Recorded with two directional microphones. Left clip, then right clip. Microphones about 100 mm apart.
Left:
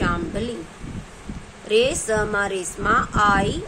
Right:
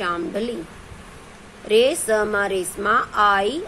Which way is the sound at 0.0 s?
40° right (ahead or behind).